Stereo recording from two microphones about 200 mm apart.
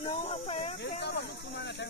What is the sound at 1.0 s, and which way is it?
Speech, 60° left (ahead or behind).